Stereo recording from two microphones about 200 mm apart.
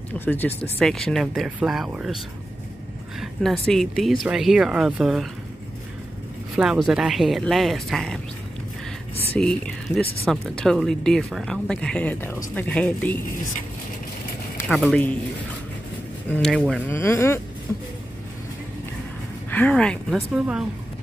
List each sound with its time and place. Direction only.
0.2 s speech: 10° left (ahead or behind)
6.5 s speech: centre (ahead or behind)
9.4 s speech: 5° left (ahead or behind)
14.7 s speech: 5° left (ahead or behind)
16.3 s speech: centre (ahead or behind)
19.5 s speech: 5° left (ahead or behind)